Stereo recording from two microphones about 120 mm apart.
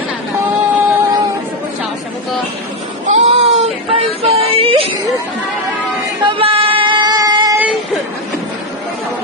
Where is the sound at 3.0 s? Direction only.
65° right (ahead or behind).